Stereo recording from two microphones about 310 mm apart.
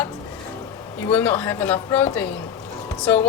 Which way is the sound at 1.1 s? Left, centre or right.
Centre.